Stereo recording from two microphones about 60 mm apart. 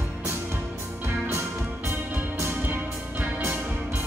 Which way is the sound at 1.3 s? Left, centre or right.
Right.